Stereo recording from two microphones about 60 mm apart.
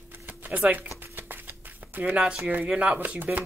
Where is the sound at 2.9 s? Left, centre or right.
Right.